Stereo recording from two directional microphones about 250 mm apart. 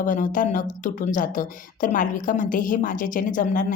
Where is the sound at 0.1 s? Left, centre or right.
Left.